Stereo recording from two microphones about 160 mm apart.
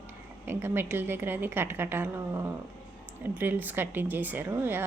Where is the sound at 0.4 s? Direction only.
15° right (ahead or behind).